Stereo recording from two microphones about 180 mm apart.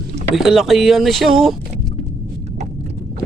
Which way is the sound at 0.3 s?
Centre (ahead or behind).